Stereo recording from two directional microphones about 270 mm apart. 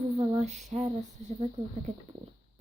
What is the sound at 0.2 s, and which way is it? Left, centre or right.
Female singing, right.